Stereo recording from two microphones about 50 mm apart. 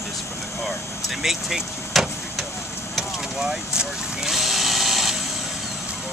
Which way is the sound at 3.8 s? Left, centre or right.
Centre.